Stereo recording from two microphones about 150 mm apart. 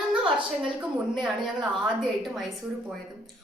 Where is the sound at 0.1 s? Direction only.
10° right (ahead or behind).